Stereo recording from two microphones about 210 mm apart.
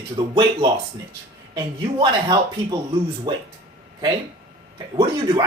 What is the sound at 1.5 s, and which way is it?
Speech, 20° right (ahead or behind).